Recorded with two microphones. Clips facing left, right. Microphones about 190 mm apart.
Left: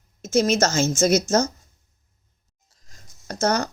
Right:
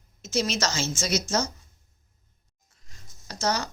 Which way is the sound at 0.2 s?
50° left (ahead or behind).